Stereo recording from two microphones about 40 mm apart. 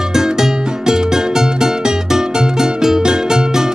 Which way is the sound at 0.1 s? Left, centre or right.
Centre.